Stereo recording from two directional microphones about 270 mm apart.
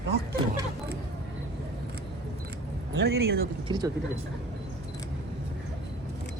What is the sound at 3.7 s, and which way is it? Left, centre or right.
Speech, centre.